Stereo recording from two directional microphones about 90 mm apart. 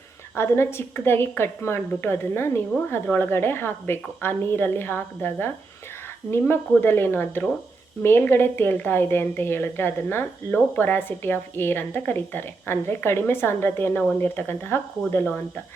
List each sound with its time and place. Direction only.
0.3 s a woman's voice: 30° left (ahead or behind)